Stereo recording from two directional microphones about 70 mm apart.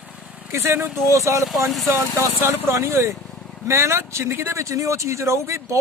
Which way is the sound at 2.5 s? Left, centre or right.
Right.